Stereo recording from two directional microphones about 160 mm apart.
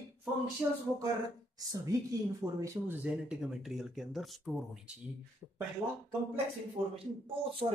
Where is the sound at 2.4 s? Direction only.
20° right (ahead or behind).